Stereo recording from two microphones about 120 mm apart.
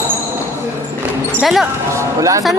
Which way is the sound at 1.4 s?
Centre (ahead or behind).